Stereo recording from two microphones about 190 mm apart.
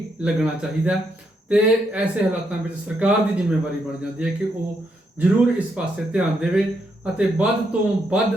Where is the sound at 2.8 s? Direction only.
5° right (ahead or behind).